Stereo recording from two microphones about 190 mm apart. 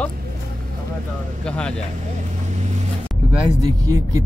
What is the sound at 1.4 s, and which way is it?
Speech, 5° left (ahead or behind).